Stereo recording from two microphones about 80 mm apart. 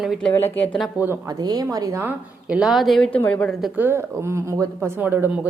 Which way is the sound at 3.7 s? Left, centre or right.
Right.